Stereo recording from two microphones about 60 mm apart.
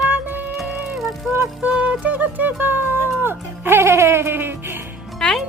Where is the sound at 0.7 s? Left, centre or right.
Centre.